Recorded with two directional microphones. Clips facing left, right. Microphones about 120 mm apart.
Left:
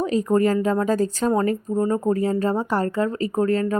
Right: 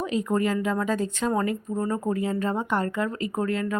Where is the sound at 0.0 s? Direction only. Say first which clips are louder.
Left 5 dB; 35° left (ahead or behind).